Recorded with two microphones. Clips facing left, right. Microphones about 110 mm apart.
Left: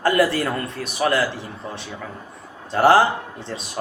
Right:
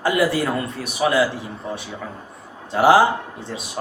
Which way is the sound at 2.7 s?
10° right (ahead or behind).